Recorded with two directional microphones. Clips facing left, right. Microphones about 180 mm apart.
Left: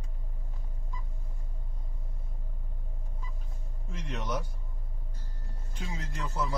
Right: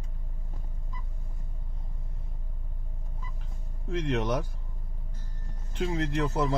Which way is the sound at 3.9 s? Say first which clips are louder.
Right 8 dB; 70° right (ahead or behind).